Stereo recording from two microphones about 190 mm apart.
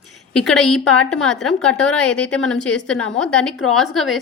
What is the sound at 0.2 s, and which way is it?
A woman's voice, centre (ahead or behind).